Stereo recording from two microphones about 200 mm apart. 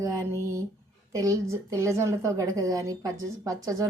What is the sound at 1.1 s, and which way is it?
A woman's voice, 15° right (ahead or behind).